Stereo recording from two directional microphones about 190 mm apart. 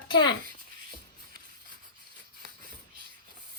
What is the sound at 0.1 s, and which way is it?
Speech, 25° left (ahead or behind).